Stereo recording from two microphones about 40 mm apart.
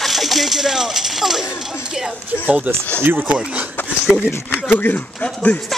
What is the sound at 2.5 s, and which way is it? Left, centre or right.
Speech, right.